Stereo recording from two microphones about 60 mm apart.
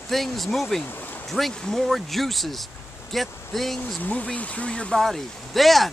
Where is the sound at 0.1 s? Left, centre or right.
Centre.